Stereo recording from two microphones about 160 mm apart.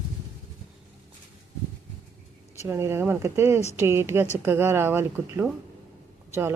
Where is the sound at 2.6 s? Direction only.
15° right (ahead or behind).